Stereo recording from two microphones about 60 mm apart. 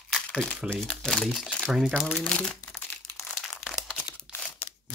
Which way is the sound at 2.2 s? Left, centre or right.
Centre.